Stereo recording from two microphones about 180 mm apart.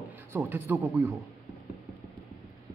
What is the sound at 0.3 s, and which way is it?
Speech, 10° right (ahead or behind).